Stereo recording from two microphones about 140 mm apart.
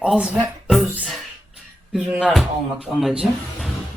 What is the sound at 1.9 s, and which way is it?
A woman's voice, 5° right (ahead or behind).